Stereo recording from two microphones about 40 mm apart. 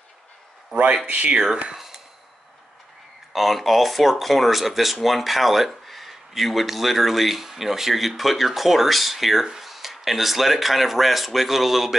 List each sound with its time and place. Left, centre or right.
1.0 s speech: right
3.3 s speech: centre